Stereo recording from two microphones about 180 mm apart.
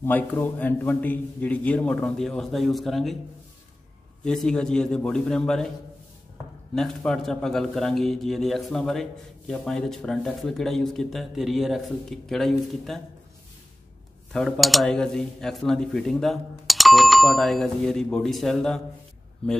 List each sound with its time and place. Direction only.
0.0 s a man's voice: 10° left (ahead or behind)
4.2 s speech: 5° left (ahead or behind)
6.7 s speech: centre (ahead or behind)
14.3 s speech: centre (ahead or behind)